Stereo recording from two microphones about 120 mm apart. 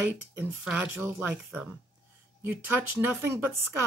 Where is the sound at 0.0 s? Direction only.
20° right (ahead or behind).